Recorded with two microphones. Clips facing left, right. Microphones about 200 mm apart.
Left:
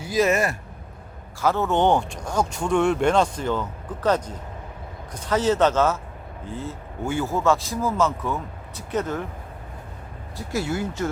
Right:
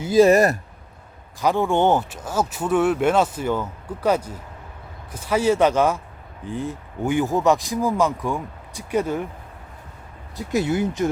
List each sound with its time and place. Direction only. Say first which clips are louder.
0.0 s speech: right 7 dB; 30° right (ahead or behind)
1.4 s speech: right 2 dB; 15° right (ahead or behind)
10.3 s speech: right 5 dB; 20° right (ahead or behind)